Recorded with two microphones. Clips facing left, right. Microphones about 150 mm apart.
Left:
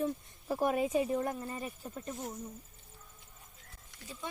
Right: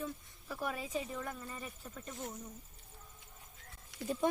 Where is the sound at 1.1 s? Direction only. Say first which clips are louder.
Left 9 dB; 35° left (ahead or behind).